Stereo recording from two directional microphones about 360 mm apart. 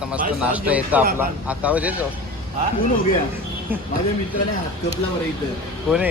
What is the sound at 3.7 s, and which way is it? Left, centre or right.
Speech, centre.